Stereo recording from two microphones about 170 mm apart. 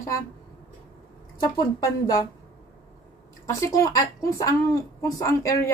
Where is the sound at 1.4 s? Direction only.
20° left (ahead or behind).